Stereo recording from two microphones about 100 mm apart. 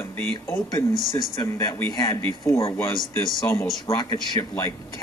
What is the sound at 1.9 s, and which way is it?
Speech, 40° left (ahead or behind).